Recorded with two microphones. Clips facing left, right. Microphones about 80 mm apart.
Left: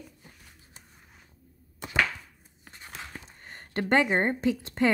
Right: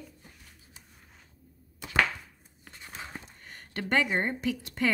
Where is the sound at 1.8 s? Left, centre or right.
Left.